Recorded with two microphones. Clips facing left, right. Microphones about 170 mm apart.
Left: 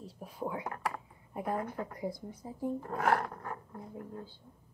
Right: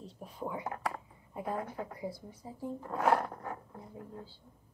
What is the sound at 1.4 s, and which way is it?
Speech, 60° left (ahead or behind).